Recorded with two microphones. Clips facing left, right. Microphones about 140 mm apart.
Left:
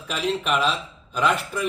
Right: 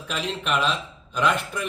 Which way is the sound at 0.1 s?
5° left (ahead or behind).